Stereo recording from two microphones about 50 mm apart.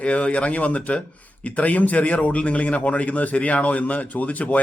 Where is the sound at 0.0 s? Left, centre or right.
Left.